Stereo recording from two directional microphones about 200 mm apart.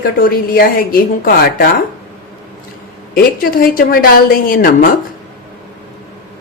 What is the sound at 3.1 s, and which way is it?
A woman's voice, 45° left (ahead or behind).